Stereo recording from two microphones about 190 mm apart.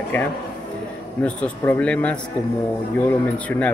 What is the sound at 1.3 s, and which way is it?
Speech, 5° left (ahead or behind).